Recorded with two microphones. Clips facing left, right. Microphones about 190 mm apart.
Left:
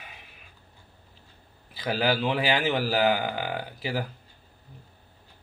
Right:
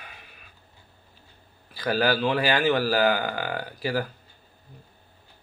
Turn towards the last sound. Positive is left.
turn(degrees=20)  # may be behind; listen again after turning